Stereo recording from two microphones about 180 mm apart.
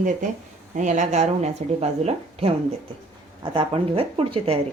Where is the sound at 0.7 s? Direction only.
40° right (ahead or behind).